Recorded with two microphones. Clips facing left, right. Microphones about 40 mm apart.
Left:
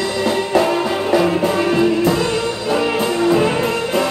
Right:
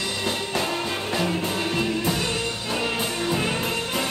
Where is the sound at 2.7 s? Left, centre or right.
Left.